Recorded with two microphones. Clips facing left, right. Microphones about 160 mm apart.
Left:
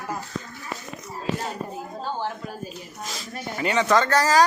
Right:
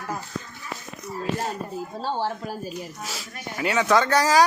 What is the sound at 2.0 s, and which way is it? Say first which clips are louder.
Speech: right 3 dB; 30° right (ahead or behind).